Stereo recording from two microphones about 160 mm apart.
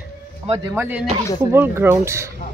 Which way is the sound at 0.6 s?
10° right (ahead or behind).